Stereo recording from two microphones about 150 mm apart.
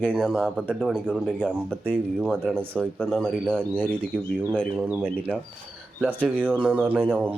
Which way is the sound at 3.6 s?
15° left (ahead or behind).